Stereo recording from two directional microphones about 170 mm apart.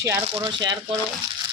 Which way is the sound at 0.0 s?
15° right (ahead or behind).